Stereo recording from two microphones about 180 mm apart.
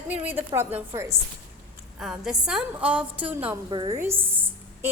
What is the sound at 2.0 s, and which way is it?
A woman's voice, centre (ahead or behind).